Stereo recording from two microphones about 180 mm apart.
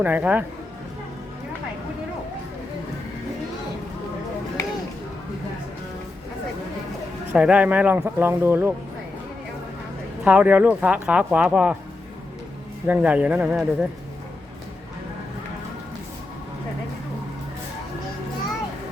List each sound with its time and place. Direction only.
0.0 s speech: 10° right (ahead or behind)
4.6 s a sound: 15° left (ahead or behind)
7.3 s speech: 5° right (ahead or behind)
10.2 s speech: 10° right (ahead or behind)
12.9 s speech: 5° right (ahead or behind)